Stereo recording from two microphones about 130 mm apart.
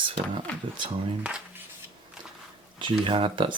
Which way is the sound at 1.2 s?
10° right (ahead or behind).